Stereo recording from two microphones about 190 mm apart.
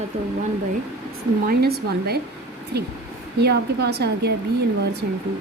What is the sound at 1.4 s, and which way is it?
Speech, 55° right (ahead or behind).